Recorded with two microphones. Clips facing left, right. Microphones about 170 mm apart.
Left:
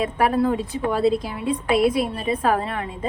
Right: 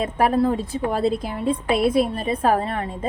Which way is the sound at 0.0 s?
35° right (ahead or behind).